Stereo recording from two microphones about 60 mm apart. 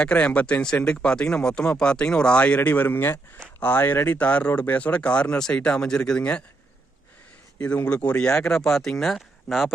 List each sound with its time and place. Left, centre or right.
0.0 s speech: centre
2.6 s speech: left; by 6.4 s centre
7.9 s speech: centre